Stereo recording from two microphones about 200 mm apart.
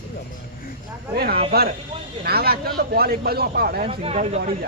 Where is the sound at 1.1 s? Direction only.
50° right (ahead or behind).